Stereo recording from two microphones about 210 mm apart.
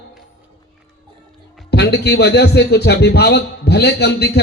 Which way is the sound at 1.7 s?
50° left (ahead or behind).